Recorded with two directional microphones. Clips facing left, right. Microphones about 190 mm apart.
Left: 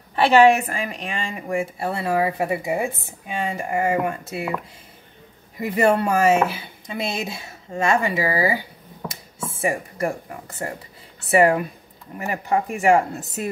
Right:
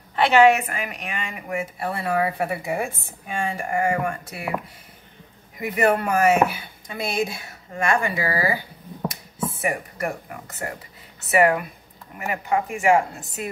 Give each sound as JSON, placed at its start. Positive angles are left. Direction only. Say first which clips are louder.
{"t": 0.1, "sound": "speech", "louder": "left 1 dB", "side_deg": 30}
{"t": 5.8, "sound": "speech", "louder": "left 2 dB", "side_deg": 30}
{"t": 11.1, "sound": "a woman's voice", "louder": "left 2 dB", "side_deg": 30}